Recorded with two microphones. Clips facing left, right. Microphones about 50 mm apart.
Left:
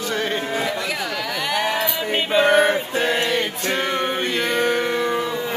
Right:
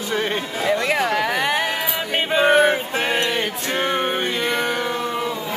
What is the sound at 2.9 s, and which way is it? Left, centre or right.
Music, right.